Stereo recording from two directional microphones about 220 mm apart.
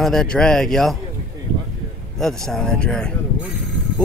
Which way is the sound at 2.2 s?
Centre (ahead or behind).